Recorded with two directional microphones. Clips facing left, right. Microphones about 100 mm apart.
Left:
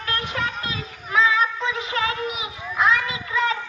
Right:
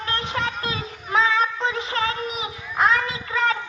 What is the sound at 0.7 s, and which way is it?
Child singing, 35° right (ahead or behind).